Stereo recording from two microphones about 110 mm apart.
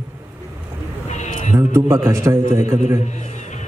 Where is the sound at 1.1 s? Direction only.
90° left.